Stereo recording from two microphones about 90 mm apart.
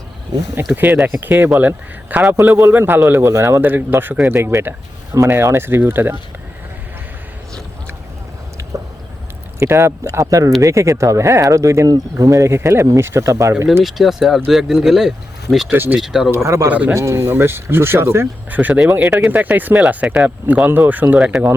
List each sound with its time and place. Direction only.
0.7 s a man's voice: 15° right (ahead or behind)
9.6 s speech: 30° right (ahead or behind)
13.8 s speech: centre (ahead or behind)
15.7 s a man's voice: 20° right (ahead or behind)
16.0 s speech: 5° right (ahead or behind)
16.3 s speech: 30° right (ahead or behind)
16.6 s speech: 15° right (ahead or behind)
16.9 s a man's voice: 35° right (ahead or behind)
19.0 s speech: 10° right (ahead or behind)
19.3 s a man's voice: 20° right (ahead or behind)